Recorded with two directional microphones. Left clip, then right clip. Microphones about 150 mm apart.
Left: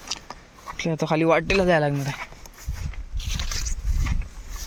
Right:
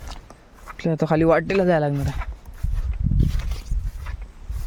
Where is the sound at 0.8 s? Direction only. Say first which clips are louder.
Right 3 dB; 50° right (ahead or behind); by 2.1 s 35° right (ahead or behind).